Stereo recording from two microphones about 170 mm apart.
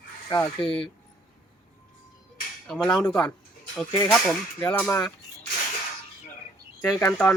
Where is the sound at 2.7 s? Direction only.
5° left (ahead or behind).